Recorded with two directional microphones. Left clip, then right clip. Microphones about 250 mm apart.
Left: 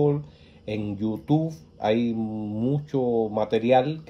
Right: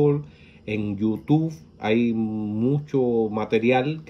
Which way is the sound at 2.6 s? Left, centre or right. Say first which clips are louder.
Right 3 dB; centre.